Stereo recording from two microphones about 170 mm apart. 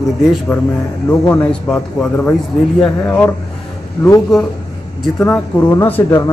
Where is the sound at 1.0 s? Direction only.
15° left (ahead or behind).